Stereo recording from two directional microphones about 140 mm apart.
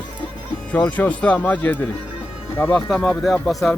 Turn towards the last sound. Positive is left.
turn(degrees=0)  # may be behind; listen again after turning